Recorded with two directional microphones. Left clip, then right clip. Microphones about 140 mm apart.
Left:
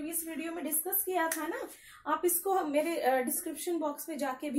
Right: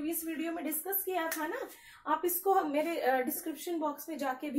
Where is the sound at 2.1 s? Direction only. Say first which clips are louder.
Even; 20° left (ahead or behind).